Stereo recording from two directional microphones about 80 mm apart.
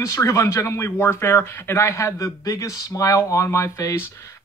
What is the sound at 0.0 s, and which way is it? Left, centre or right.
Speech, left.